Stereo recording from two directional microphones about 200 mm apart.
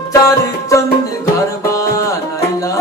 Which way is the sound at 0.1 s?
15° left (ahead or behind).